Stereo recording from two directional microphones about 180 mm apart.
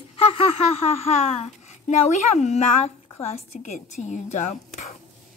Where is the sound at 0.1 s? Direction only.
35° left (ahead or behind).